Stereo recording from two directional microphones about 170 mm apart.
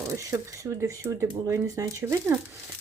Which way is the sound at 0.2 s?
20° right (ahead or behind).